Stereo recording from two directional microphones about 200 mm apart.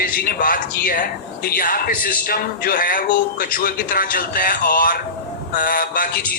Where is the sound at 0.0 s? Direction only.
50° left (ahead or behind).